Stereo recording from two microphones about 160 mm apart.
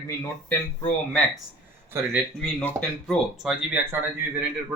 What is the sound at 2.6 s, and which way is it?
Speech, 10° left (ahead or behind).